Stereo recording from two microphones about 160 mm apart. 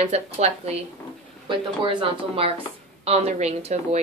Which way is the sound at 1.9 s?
35° right (ahead or behind).